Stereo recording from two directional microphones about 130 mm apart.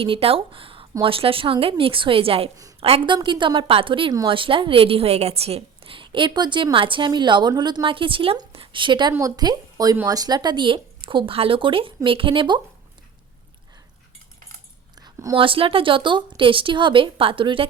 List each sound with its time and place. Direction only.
0.0 s a woman's voice: 45° right (ahead or behind)
14.9 s a sound: 30° right (ahead or behind)
15.4 s a woman's voice: 45° right (ahead or behind)